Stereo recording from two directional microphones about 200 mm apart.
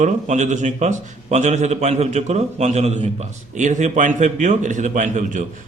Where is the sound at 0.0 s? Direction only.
35° right (ahead or behind).